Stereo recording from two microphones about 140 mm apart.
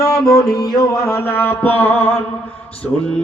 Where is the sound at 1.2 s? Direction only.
15° left (ahead or behind).